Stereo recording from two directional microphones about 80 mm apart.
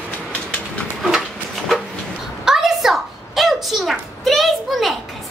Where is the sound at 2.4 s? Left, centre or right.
Centre.